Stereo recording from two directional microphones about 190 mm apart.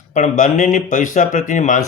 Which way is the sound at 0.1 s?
40° left (ahead or behind).